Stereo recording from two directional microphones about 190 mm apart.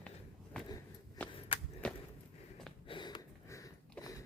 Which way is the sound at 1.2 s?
10° left (ahead or behind).